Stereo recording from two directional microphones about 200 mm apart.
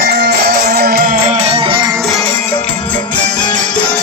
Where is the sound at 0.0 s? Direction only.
50° right (ahead or behind).